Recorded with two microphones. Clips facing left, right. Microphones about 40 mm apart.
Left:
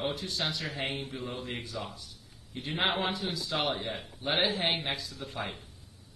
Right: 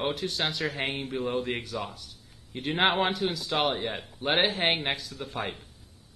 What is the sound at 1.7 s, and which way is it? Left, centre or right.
Speech, right.